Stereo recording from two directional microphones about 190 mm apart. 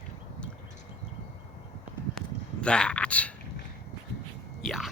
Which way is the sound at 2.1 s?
5° left (ahead or behind).